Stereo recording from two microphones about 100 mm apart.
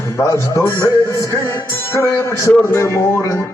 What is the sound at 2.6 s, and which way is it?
Speech, 30° left (ahead or behind).